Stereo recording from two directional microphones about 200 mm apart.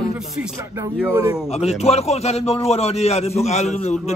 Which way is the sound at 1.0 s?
15° right (ahead or behind).